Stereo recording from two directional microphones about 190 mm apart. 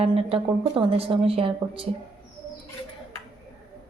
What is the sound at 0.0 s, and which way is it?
Speech, 30° right (ahead or behind).